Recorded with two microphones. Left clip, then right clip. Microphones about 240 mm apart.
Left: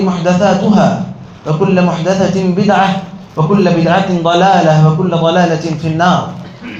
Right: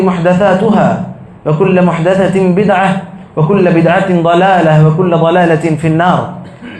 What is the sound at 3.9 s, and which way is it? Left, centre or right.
Speech, right.